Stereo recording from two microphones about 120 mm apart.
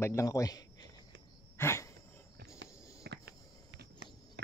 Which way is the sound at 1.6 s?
20° left (ahead or behind).